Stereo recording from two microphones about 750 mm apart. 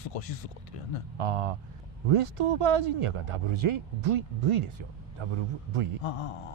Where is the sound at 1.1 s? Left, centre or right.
Right.